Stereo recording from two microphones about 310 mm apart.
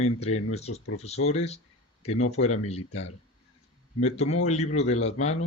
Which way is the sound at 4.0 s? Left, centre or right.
Left.